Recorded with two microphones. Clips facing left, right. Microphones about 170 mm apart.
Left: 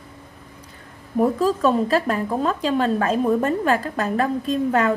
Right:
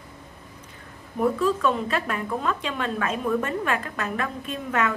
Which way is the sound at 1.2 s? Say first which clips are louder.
Left 4 dB; 40° left (ahead or behind).